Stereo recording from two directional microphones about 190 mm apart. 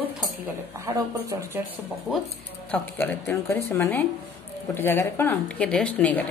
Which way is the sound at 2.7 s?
10° left (ahead or behind).